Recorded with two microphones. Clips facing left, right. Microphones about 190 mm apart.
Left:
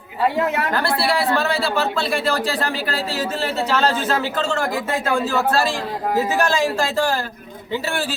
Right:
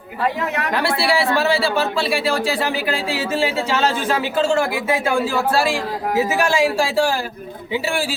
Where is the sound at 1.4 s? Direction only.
5° right (ahead or behind).